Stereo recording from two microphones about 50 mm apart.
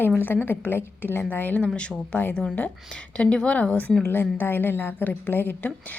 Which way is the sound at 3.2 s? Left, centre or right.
Left.